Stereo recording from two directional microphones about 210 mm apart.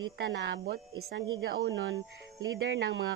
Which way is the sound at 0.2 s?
55° right (ahead or behind).